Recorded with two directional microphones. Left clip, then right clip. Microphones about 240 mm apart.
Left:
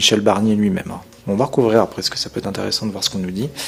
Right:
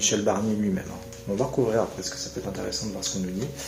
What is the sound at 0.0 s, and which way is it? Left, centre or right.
Speech, left.